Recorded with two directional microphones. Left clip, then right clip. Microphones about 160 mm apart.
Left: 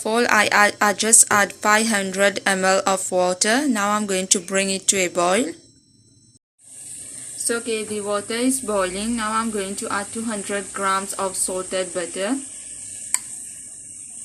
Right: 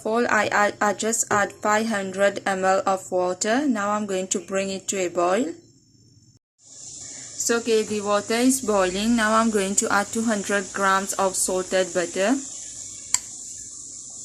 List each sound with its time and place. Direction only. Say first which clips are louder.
0.0 s speech: left 3 dB; centre (ahead or behind)
7.4 s speech: right 3 dB; 45° right (ahead or behind)